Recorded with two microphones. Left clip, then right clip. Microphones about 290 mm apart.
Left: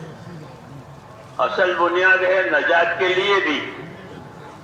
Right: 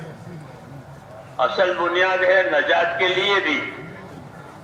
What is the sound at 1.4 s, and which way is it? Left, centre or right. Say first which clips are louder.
Speech: left 1 dB; right.